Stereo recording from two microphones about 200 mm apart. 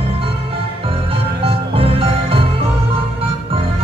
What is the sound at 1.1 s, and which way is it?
Music, 30° right (ahead or behind).